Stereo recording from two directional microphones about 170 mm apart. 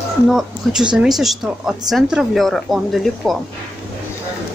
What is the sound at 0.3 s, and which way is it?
Speech, 5° right (ahead or behind).